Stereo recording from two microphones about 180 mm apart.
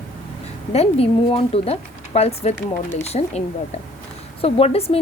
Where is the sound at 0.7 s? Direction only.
35° left (ahead or behind).